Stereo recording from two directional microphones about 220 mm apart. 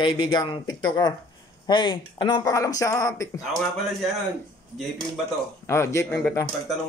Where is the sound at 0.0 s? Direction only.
20° left (ahead or behind).